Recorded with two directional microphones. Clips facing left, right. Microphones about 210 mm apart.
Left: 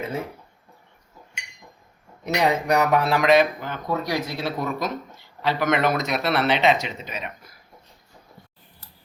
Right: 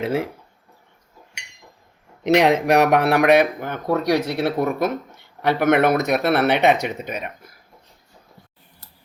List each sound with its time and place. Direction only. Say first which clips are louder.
0.0 s speech: right 7 dB; 90° right
2.2 s speech: right 6 dB; 90° right; by 7.3 s 55° right (ahead or behind)